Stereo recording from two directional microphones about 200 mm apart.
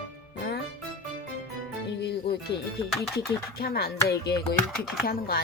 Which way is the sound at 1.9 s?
55° left (ahead or behind).